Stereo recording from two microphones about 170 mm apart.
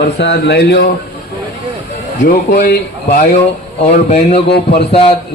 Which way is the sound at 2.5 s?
70° left (ahead or behind).